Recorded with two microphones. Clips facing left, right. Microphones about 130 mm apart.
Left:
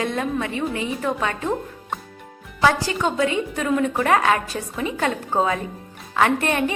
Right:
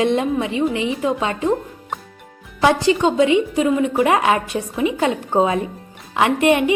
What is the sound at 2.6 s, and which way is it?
A woman's voice, 20° right (ahead or behind).